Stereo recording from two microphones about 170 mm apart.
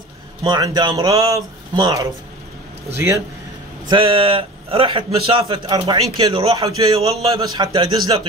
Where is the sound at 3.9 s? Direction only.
30° right (ahead or behind).